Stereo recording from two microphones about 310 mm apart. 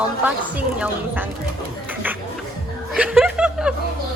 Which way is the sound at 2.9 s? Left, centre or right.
Centre.